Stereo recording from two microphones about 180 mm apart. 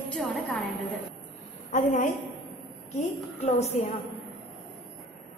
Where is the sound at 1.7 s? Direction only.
45° left (ahead or behind).